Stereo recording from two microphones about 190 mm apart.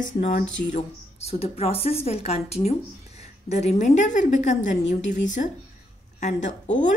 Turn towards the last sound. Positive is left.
turn(degrees=40)  # may be behind; listen again after turning